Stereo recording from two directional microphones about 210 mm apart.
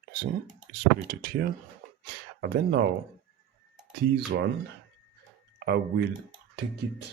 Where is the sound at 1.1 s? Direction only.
45° right (ahead or behind).